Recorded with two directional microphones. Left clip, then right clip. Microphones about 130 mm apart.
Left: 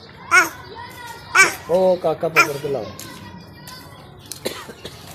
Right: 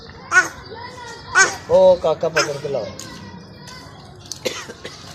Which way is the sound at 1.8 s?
50° left (ahead or behind).